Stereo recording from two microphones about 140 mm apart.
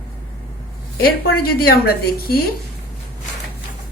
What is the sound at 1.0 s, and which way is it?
A woman's voice, 90° left.